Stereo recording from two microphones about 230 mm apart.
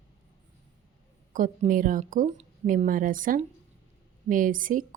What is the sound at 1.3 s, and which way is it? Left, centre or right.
Speech, right.